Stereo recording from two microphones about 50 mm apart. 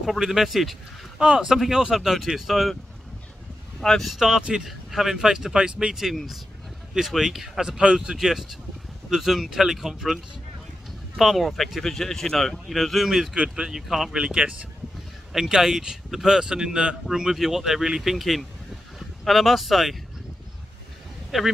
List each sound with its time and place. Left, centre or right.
0.0 s speech: centre
1.1 s speech: centre
3.8 s speech: centre
4.1 s speech: centre
6.1 s speech: centre
8.2 s speech: centre
13.3 s speech: centre
14.1 s speech: centre
15.3 s speech: centre
21.3 s speech: centre